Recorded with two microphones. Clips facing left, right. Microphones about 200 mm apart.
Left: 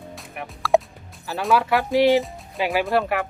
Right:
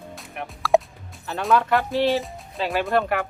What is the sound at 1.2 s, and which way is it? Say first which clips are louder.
Speech: even; centre (ahead or behind).